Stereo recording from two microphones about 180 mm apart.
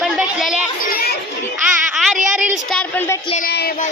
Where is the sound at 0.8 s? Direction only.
55° left (ahead or behind).